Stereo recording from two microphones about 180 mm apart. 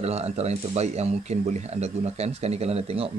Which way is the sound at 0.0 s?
35° right (ahead or behind).